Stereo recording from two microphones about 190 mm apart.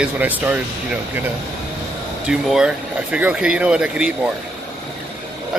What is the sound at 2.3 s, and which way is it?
Speech, 5° right (ahead or behind).